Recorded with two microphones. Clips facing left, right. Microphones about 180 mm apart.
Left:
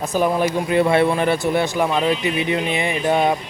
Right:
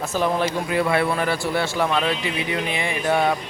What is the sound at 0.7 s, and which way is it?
Speech, 25° left (ahead or behind).